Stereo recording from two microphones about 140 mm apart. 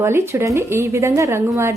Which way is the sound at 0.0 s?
20° right (ahead or behind).